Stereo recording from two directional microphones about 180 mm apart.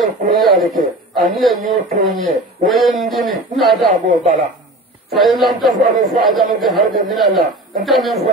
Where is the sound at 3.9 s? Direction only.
45° right (ahead or behind).